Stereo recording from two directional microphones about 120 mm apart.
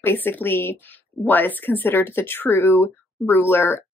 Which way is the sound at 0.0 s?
15° left (ahead or behind).